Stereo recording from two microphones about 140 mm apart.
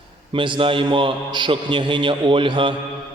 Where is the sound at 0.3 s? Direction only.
35° right (ahead or behind).